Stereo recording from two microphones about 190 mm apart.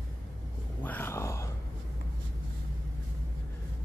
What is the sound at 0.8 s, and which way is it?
Speech, 10° left (ahead or behind).